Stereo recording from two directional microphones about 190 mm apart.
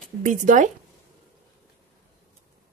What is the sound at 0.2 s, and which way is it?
Speech, 45° right (ahead or behind).